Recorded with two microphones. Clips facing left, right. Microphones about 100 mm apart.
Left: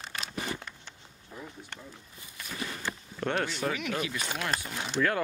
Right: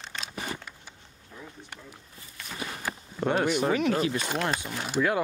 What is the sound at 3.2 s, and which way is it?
Speech, 10° right (ahead or behind).